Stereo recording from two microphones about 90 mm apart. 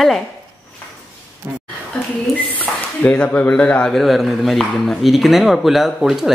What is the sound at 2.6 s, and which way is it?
Speech, 15° left (ahead or behind).